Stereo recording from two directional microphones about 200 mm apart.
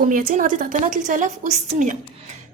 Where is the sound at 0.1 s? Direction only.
45° right (ahead or behind).